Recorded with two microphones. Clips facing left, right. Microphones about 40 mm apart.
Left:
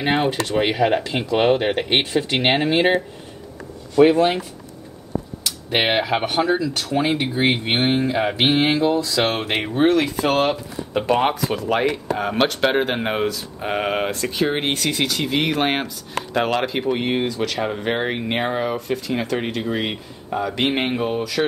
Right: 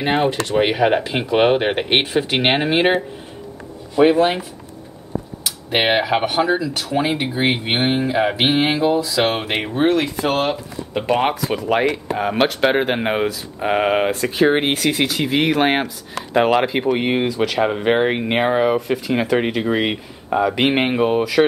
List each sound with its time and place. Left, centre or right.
0.0 s speech: centre
0.6 s speech: centre
5.4 s speech: centre